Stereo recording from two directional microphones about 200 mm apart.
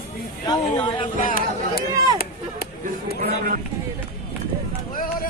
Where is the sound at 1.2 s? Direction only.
45° left (ahead or behind).